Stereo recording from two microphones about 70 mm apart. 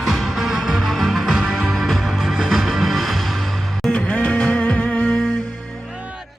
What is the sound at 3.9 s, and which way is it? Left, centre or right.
Music, centre.